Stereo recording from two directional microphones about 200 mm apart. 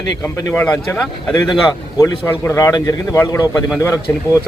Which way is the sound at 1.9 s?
15° left (ahead or behind).